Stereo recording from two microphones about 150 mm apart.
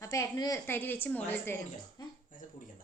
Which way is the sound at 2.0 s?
25° left (ahead or behind).